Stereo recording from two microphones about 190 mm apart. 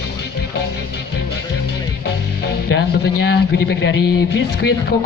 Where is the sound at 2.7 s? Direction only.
55° left (ahead or behind).